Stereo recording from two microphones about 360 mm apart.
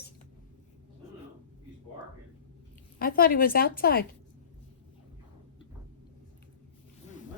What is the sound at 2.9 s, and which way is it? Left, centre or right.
A woman's voice, left.